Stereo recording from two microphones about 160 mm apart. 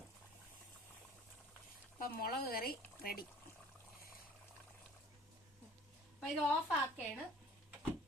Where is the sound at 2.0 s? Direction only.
70° left (ahead or behind).